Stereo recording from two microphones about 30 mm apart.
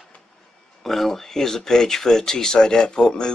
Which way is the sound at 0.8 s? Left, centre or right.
Centre.